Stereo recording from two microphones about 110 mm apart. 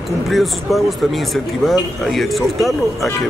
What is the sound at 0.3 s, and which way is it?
Speech, centre (ahead or behind).